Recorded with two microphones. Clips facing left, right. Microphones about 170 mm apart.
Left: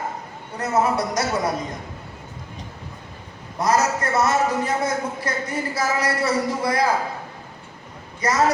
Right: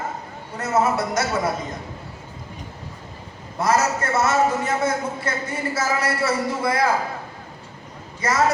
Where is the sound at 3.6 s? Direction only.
25° right (ahead or behind).